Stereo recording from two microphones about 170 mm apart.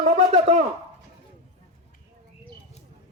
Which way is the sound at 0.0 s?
40° right (ahead or behind).